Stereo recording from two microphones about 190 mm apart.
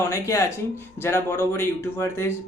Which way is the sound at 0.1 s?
15° left (ahead or behind).